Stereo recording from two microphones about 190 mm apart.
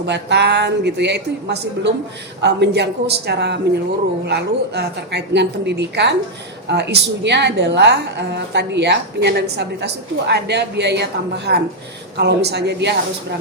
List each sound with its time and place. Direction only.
0.0 s a woman's voice: 65° right (ahead or behind)